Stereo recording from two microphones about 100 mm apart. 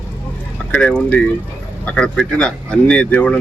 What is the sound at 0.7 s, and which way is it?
Speech, 10° left (ahead or behind).